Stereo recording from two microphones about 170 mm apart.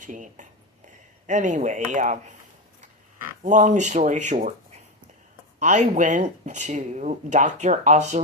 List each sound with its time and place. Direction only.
0.0 s speech: 50° right (ahead or behind)
3.4 s speech: 45° right (ahead or behind)
5.5 s speech: 45° right (ahead or behind)